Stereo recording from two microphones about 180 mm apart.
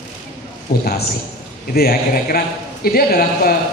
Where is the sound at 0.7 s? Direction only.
60° left (ahead or behind).